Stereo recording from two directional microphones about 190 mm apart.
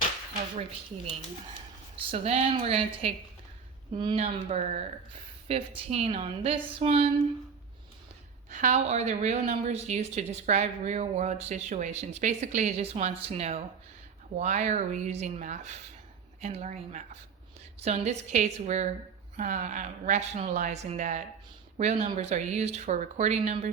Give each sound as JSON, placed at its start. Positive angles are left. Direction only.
{"t": 2.0, "sound": "a woman's voice", "side_deg": -30}
{"t": 8.4, "sound": "a woman's voice", "side_deg": -40}